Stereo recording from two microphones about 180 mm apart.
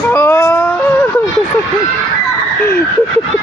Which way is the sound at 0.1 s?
15° left (ahead or behind).